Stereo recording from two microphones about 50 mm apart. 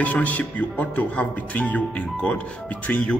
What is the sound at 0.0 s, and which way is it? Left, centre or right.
Speech, left.